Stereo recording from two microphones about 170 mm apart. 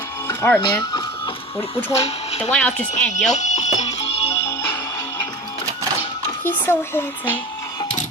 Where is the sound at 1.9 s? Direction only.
40° left (ahead or behind).